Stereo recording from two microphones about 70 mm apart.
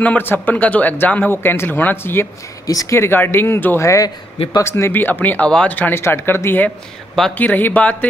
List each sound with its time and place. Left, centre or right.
0.0 s speech: left
2.6 s speech: left
3.0 s speech: left
3.8 s a man's voice: left